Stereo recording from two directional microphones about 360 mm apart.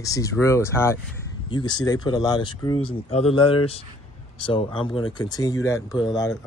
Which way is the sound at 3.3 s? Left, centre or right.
Left.